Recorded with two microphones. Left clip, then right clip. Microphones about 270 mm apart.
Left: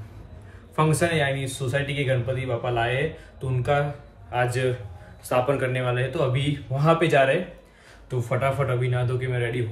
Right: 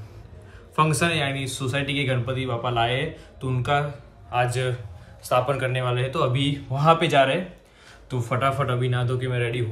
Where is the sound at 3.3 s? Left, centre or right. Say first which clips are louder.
Even; centre.